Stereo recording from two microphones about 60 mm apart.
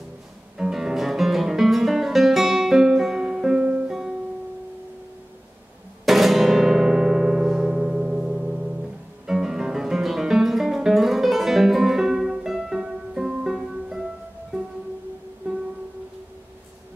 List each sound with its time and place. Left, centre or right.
0.6 s music: centre
3.6 s music: right
6.0 s music: centre
9.2 s guitar: centre